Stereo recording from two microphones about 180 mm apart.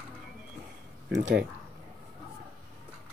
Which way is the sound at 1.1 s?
85° right.